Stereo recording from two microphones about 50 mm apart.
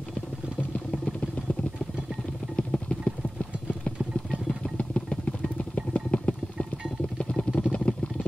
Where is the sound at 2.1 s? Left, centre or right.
Centre.